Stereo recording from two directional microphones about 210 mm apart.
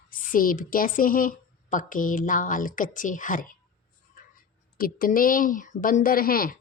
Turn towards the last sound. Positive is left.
turn(degrees=45)  # may be behind; listen again after turning